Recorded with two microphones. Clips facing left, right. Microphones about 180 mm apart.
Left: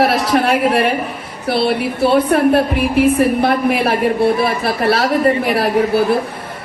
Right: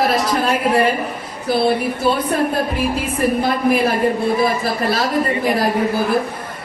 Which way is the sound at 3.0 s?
70° left (ahead or behind).